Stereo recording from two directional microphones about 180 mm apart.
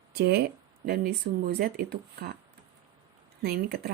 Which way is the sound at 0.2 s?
65° right (ahead or behind).